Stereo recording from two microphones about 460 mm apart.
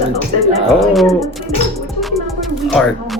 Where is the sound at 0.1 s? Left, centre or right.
Centre.